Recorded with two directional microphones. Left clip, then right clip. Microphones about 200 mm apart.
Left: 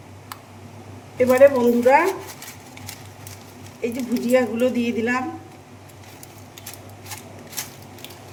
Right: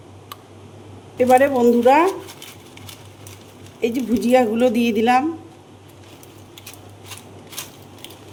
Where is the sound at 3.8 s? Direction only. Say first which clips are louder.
Right 4 dB; 50° right (ahead or behind).